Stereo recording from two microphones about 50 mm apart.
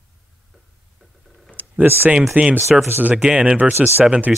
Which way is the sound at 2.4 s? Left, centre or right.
Right.